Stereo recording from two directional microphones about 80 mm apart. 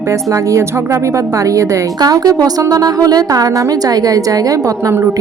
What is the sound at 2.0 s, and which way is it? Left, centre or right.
A woman's voice, right.